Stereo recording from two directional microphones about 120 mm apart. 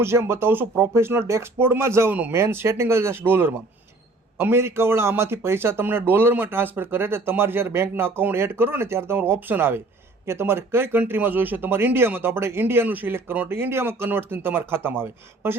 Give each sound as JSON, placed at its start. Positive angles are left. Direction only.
{"t": 0.0, "sound": "speech", "side_deg": -20}